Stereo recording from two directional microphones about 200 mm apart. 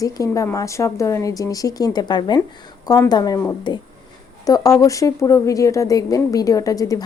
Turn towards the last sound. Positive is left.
turn(degrees=15)  # may be behind; listen again after turning